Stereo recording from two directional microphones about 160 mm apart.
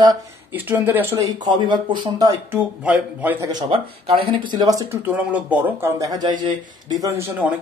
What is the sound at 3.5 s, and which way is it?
Speech, 30° right (ahead or behind).